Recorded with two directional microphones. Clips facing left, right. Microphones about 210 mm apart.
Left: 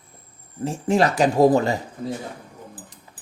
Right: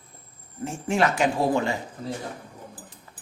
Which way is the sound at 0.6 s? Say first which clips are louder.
Left 4 dB; 35° left (ahead or behind).